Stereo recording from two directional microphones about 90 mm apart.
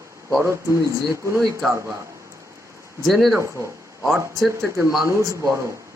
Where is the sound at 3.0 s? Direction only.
Centre (ahead or behind).